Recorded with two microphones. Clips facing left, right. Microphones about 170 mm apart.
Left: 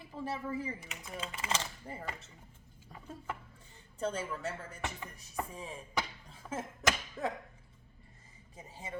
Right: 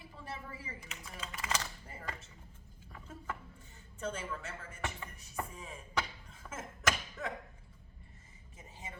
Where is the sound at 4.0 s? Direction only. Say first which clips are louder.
Left 4 dB; 35° left (ahead or behind).